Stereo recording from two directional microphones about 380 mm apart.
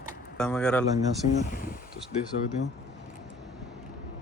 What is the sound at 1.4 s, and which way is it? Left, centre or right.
Speech, centre.